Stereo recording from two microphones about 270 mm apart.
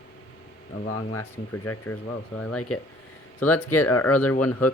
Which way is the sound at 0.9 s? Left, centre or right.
Left.